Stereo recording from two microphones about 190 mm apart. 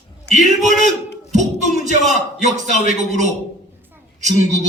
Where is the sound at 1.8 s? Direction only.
40° right (ahead or behind).